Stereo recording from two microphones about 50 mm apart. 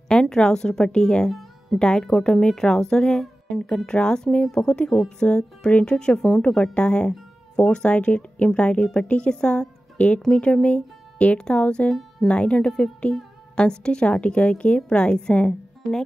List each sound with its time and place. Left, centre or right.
0.1 s a woman's voice: centre